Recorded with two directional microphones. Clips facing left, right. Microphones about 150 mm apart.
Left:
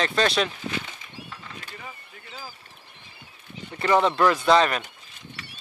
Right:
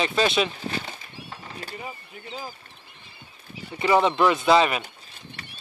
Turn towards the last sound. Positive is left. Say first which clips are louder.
# even
turn(degrees=-5)  # may be behind; listen again after turning